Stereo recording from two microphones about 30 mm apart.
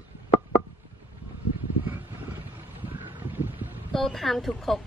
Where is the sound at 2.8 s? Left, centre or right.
Right.